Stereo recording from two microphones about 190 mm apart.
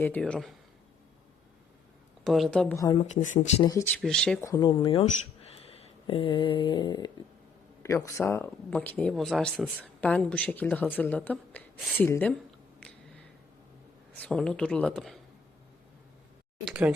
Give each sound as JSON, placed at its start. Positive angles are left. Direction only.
{"t": 0.0, "sound": "speech", "side_deg": 5}
{"t": 2.2, "sound": "speech", "side_deg": 0}
{"t": 2.9, "sound": "speech", "side_deg": 40}
{"t": 3.6, "sound": "speech", "side_deg": 15}
{"t": 4.6, "sound": "speech", "side_deg": 25}
{"t": 14.2, "sound": "speech", "side_deg": 5}
{"t": 16.6, "sound": "speech", "side_deg": -5}